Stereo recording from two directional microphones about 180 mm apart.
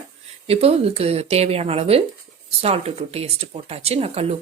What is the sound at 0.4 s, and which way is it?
Speech, 35° right (ahead or behind).